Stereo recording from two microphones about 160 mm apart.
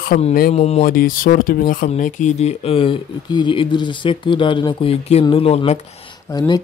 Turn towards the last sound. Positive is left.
turn(degrees=25)  # may be behind; listen again after turning